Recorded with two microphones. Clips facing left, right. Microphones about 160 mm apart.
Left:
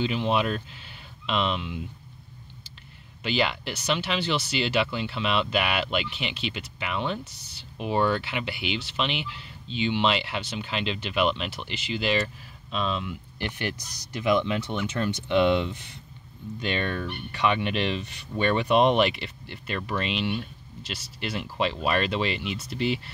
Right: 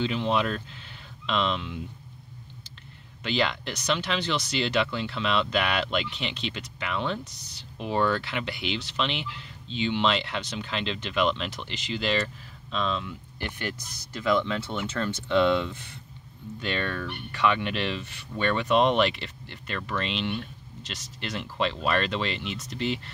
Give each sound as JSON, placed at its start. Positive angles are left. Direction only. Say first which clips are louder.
{"t": 0.0, "sound": "speech", "louder": "left 1 dB", "side_deg": 10}
{"t": 3.3, "sound": "speech", "louder": "left 1 dB", "side_deg": 10}